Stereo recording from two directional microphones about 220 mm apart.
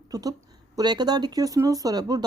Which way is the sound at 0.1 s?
15° right (ahead or behind).